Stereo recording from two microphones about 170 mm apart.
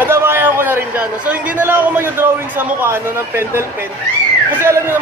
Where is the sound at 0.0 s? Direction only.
15° right (ahead or behind).